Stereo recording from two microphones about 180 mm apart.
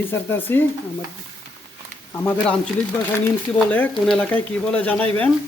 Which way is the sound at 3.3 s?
10° left (ahead or behind).